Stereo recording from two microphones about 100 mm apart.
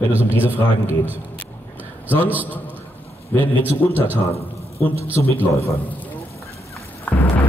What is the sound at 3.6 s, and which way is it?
Speech, 20° right (ahead or behind).